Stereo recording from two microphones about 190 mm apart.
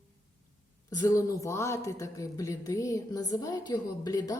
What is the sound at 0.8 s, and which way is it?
Speech, 20° left (ahead or behind).